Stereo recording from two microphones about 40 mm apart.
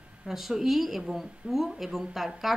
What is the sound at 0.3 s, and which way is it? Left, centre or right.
A woman's voice, centre.